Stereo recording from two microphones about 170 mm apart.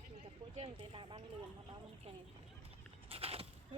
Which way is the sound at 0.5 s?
35° right (ahead or behind).